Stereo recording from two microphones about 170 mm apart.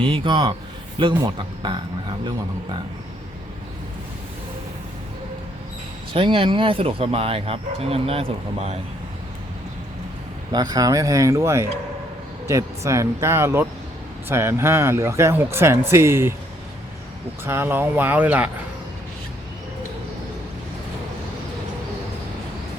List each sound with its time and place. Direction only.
0.0 s speech: 30° right (ahead or behind)
6.1 s speech: 30° right (ahead or behind)
10.5 s speech: 20° right (ahead or behind)
17.4 s speech: 15° right (ahead or behind)